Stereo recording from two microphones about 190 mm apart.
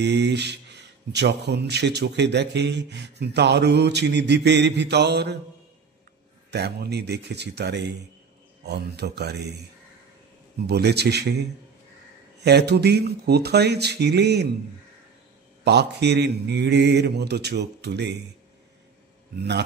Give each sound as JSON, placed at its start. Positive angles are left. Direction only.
{"t": 0.0, "sound": "speech", "side_deg": -65}
{"t": 6.5, "sound": "speech", "side_deg": -60}
{"t": 10.7, "sound": "speech", "side_deg": -60}
{"t": 15.6, "sound": "speech", "side_deg": -60}
{"t": 19.3, "sound": "speech", "side_deg": -65}